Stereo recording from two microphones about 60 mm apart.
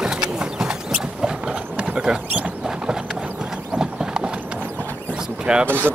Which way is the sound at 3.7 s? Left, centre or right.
Centre.